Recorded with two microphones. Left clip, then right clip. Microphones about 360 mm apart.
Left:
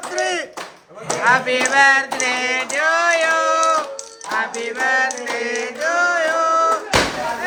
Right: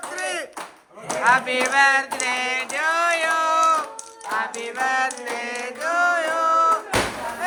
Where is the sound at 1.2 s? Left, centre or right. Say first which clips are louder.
Left 3 dB; centre.